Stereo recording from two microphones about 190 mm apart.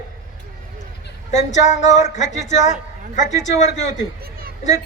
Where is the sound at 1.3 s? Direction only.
40° left (ahead or behind).